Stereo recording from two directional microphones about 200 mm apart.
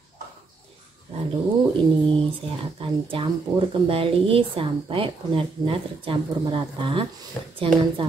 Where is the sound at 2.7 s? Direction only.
25° right (ahead or behind).